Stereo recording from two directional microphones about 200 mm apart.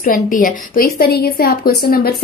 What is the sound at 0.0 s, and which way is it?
A woman's voice, 40° left (ahead or behind).